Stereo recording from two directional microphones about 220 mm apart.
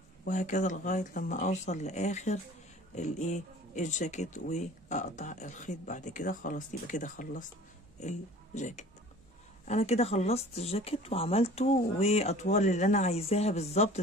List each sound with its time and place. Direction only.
0.2 s speech: 35° left (ahead or behind)